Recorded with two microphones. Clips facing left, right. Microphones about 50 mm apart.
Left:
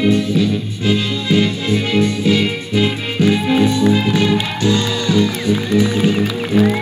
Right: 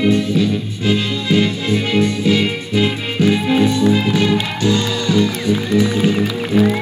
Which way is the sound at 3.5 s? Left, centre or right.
Left.